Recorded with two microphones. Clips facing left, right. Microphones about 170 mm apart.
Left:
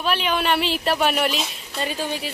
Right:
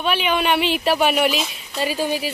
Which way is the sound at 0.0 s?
Centre (ahead or behind).